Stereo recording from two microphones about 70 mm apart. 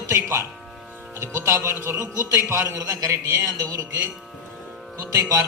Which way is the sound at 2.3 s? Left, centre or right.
Right.